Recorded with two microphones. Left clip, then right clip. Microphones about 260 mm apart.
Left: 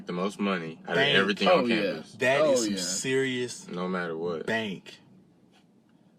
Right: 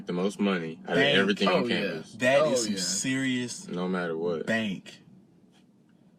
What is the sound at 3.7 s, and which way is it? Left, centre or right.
Speech, centre.